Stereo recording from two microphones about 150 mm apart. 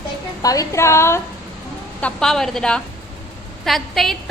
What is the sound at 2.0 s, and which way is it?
A woman's voice, 5° left (ahead or behind).